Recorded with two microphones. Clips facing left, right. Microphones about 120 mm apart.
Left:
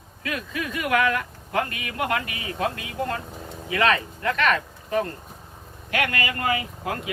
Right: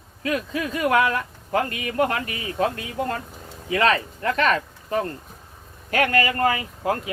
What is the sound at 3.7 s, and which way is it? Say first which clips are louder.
Speech: right 2 dB; 35° right (ahead or behind).